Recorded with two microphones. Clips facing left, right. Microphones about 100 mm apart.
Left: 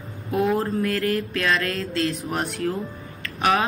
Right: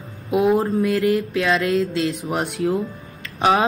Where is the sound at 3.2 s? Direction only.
25° right (ahead or behind).